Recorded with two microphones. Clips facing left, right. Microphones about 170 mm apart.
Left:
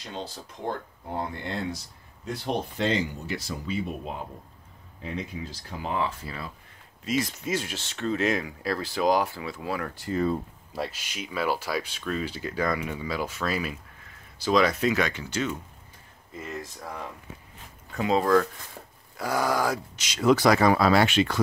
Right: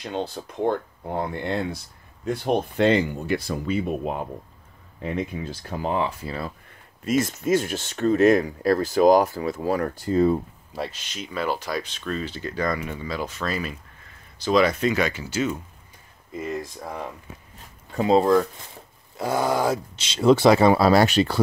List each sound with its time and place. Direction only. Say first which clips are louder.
0.0 s speech: right 8 dB; 60° right (ahead or behind)
5.9 s speech: right 3 dB; 20° right (ahead or behind)
7.1 s speech: right 6 dB; 50° right (ahead or behind)
10.1 s speech: right 6 dB; 20° right (ahead or behind)
10.7 s speech: right 1 dB; 5° left (ahead or behind); by 17.0 s 15° right (ahead or behind)
17.9 s speech: right 4 dB; 30° right (ahead or behind)